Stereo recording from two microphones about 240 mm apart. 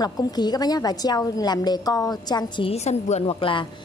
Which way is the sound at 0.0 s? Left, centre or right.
Centre.